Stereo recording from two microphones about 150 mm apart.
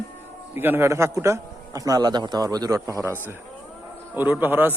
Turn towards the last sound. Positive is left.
turn(degrees=-15)  # may be behind; listen again after turning